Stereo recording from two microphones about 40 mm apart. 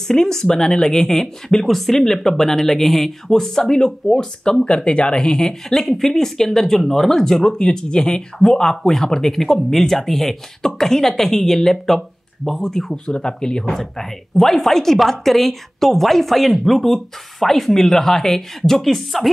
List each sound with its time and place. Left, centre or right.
0.1 s speech: centre
4.6 s speech: left
5.5 s speech: centre
12.9 s speech: centre
13.7 s speech: centre